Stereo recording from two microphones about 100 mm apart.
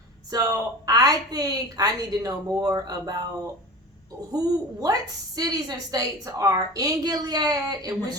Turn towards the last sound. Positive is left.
turn(degrees=-40)  # may be behind; listen again after turning